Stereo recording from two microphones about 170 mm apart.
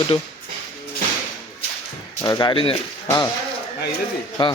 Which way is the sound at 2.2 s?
25° left (ahead or behind).